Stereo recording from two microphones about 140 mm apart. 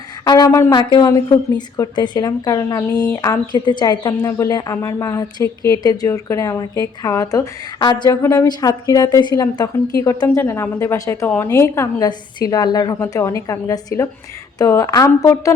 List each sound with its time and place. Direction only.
0.3 s a woman's voice: 25° left (ahead or behind)
8.1 s a woman's voice: 20° left (ahead or behind)